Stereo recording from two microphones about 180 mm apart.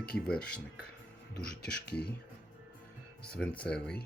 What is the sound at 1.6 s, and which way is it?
Speech, 65° left (ahead or behind).